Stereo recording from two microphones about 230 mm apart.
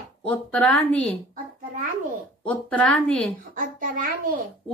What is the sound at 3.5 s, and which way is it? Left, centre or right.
Speech, right.